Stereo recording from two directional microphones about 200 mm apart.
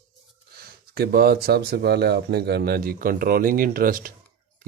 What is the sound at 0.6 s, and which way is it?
Speech, 50° right (ahead or behind).